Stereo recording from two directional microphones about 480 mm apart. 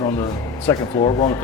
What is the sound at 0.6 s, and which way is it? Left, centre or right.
Speech, centre.